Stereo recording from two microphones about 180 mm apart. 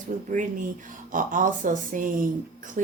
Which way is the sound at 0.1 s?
45° right (ahead or behind).